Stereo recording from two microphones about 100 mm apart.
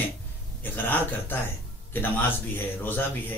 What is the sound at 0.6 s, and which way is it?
A man's voice, 20° left (ahead or behind).